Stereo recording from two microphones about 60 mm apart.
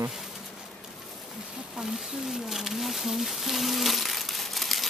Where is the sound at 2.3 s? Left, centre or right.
Centre.